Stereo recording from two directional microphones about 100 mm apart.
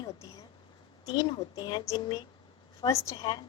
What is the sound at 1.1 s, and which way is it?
A woman's voice, 45° left (ahead or behind).